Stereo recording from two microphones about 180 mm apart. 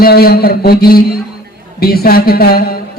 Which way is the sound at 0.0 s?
60° left (ahead or behind).